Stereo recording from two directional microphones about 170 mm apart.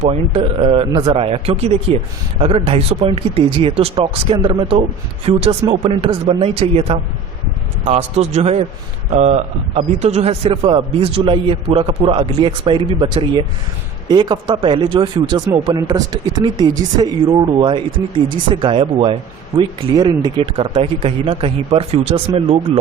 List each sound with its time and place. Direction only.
0.0 s a man's voice: 40° right (ahead or behind)